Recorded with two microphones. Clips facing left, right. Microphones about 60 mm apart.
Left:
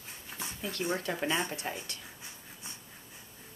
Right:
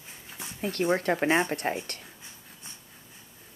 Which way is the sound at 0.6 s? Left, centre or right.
Right.